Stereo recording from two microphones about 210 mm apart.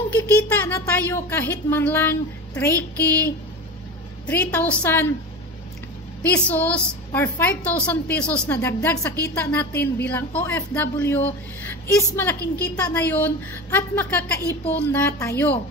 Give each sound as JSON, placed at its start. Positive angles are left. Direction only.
{"t": 0.1, "sound": "a woman's voice", "side_deg": 10}
{"t": 6.2, "sound": "a woman's voice", "side_deg": 5}
{"t": 9.7, "sound": "a woman's voice", "side_deg": 50}
{"t": 10.0, "sound": "a woman's voice", "side_deg": 5}